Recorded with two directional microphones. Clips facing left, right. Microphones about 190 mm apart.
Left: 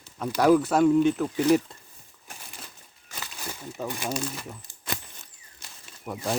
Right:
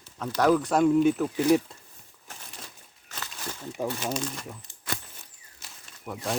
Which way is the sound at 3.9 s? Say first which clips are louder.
Even; 10° left (ahead or behind).